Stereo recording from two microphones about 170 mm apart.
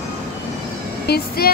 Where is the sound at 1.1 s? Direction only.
65° left (ahead or behind).